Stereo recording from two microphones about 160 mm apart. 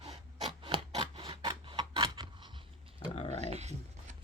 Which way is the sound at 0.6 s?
30° right (ahead or behind).